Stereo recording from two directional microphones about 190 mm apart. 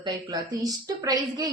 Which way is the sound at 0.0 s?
20° right (ahead or behind).